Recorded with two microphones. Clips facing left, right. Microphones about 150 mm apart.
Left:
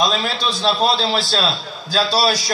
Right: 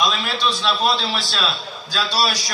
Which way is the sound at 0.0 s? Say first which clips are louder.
Left 2 dB; 35° left (ahead or behind).